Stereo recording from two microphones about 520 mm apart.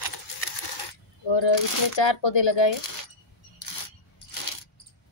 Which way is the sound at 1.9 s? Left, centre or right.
Left.